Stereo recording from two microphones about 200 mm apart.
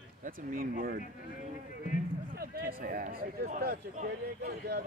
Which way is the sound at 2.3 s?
45° right (ahead or behind).